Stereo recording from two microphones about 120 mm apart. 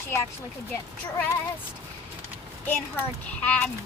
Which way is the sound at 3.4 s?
10° left (ahead or behind).